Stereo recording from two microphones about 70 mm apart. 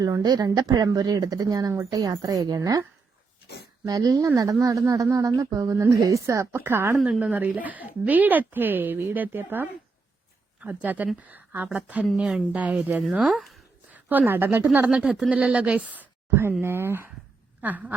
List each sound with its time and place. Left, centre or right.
0.2 s a woman's voice: right
3.8 s a woman's voice: right
7.2 s a woman's voice: right
14.8 s a woman's voice: centre